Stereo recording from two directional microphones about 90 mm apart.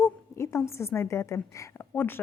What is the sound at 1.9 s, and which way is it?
Speech, 25° left (ahead or behind).